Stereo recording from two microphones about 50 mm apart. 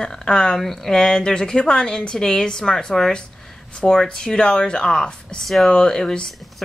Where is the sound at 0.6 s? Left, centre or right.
Centre.